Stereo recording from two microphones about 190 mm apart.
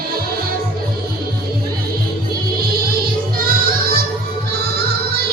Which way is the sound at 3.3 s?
50° right (ahead or behind).